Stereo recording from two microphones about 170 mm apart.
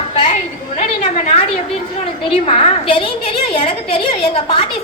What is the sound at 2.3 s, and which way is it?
A woman's voice, 35° left (ahead or behind).